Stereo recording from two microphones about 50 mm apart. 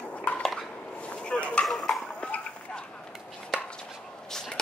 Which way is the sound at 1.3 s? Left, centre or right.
Left.